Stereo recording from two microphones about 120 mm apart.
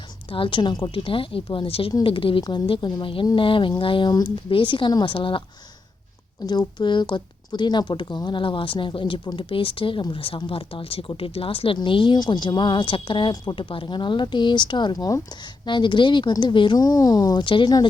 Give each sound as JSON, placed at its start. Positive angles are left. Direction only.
{"t": 0.3, "sound": "a woman's voice", "side_deg": 50}
{"t": 6.4, "sound": "speech", "side_deg": 35}